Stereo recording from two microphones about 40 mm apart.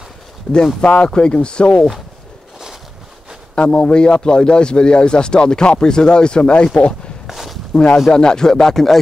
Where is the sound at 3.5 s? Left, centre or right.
Left.